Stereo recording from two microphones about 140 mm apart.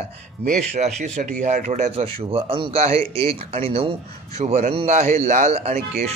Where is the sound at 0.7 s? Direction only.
55° right (ahead or behind).